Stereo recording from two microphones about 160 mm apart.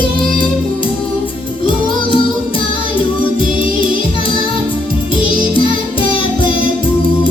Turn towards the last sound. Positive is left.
turn(degrees=30)  # may be behind; listen again after turning